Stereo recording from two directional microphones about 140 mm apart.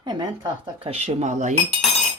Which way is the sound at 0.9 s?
45° right (ahead or behind).